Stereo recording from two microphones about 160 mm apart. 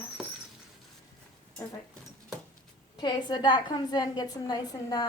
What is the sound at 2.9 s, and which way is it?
A woman's voice, 25° left (ahead or behind).